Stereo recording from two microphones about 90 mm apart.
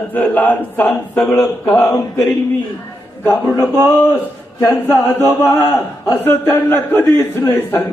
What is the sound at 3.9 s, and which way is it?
A man's voice, 20° left (ahead or behind).